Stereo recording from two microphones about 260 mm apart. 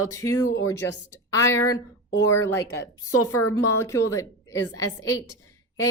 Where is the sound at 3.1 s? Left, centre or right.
Left.